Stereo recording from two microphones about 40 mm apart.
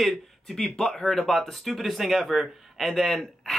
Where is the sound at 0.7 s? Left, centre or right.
Centre.